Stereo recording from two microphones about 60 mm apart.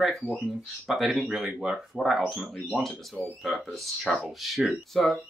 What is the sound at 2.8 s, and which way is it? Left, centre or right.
Speech, centre.